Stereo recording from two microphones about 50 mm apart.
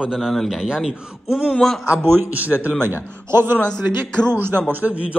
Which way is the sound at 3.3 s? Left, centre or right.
Right.